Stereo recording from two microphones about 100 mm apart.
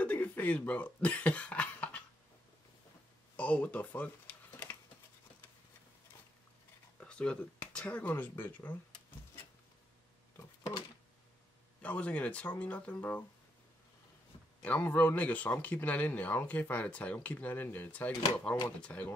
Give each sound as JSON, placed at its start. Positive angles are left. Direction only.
{"t": 0.0, "sound": "cough", "side_deg": 15}
{"t": 3.3, "sound": "a sound", "side_deg": 15}
{"t": 7.0, "sound": "speech", "side_deg": 10}
{"t": 11.8, "sound": "speech", "side_deg": 15}
{"t": 14.6, "sound": "speech", "side_deg": 15}